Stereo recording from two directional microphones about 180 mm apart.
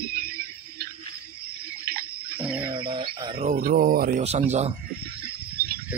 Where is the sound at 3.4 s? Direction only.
50° right (ahead or behind).